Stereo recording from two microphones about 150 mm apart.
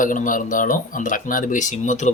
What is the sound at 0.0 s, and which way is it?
Speech, 65° left (ahead or behind).